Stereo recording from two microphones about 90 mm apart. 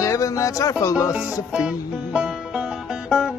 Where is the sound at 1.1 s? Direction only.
10° right (ahead or behind).